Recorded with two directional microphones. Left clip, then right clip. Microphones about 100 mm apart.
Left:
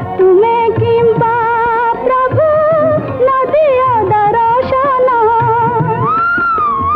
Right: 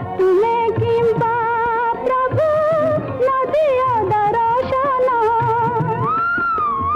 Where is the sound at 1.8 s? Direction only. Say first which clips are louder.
Left 6 dB; 35° left (ahead or behind).